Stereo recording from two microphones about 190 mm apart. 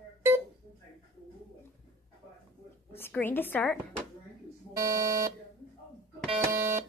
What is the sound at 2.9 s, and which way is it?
A woman's voice, 10° left (ahead or behind).